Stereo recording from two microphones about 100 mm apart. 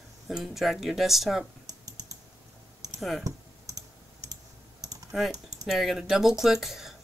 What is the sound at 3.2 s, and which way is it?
Clicking, 35° right (ahead or behind).